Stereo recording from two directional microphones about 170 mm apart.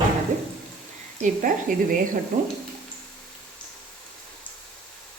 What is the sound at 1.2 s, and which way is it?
Speech, 50° right (ahead or behind).